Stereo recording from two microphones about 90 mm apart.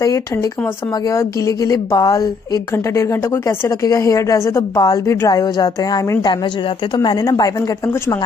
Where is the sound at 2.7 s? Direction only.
30° left (ahead or behind).